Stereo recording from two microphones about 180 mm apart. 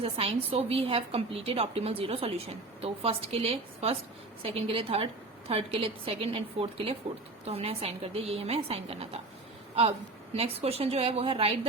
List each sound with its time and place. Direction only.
0.0 s a woman's voice: 35° right (ahead or behind)
10.3 s a woman's voice: 35° right (ahead or behind)